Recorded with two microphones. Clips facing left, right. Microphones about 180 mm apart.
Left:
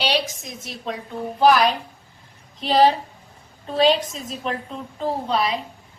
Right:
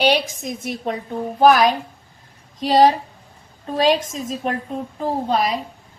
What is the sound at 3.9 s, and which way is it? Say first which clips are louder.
A woman's voice: right 3 dB; 45° right (ahead or behind).